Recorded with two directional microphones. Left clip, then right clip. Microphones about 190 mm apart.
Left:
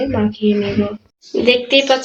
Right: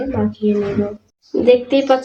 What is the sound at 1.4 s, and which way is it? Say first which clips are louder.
Speech: even; 40° right (ahead or behind).